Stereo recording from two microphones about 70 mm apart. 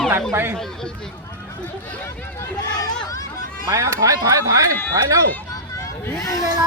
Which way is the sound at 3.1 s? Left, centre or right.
Left.